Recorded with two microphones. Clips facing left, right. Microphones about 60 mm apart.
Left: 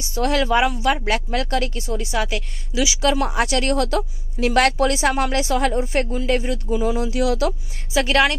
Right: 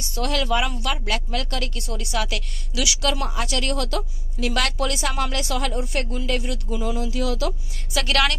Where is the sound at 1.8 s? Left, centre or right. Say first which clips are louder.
Left 4 dB; left.